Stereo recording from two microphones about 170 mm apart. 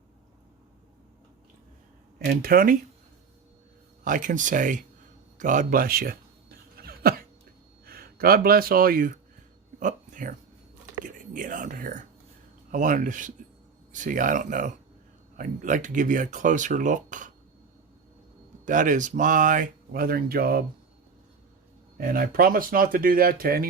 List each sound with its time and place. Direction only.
2.1 s speech: 60° right (ahead or behind)
4.0 s speech: 50° right (ahead or behind)
5.4 s a sound: 50° right (ahead or behind)
7.9 s speech: 65° right (ahead or behind)
18.6 s speech: 50° right (ahead or behind)
21.9 s speech: 60° right (ahead or behind)